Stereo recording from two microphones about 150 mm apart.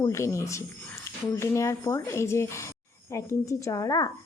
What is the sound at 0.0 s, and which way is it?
Speech, 20° left (ahead or behind).